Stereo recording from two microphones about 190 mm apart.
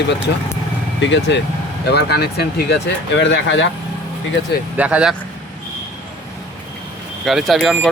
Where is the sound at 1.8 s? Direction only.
60° left (ahead or behind); by 3.7 s 75° left (ahead or behind).